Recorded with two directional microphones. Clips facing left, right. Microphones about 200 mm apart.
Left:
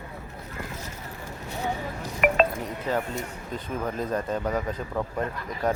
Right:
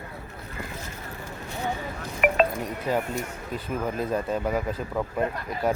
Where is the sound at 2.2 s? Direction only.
15° right (ahead or behind).